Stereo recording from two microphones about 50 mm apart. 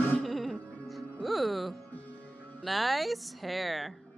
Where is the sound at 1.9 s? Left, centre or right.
Left.